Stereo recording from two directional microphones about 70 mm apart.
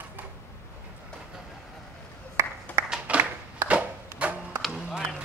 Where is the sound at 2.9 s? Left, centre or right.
Centre.